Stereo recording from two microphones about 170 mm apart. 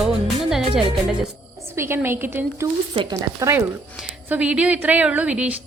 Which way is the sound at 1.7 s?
15° right (ahead or behind).